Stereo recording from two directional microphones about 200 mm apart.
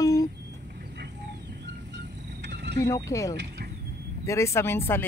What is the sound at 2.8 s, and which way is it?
Speech, 15° left (ahead or behind).